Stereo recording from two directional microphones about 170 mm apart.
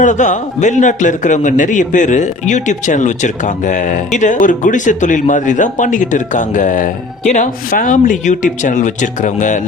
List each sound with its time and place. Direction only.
0.0 s a man's voice: 45° left (ahead or behind)